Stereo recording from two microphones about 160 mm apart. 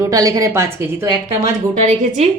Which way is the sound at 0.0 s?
20° right (ahead or behind).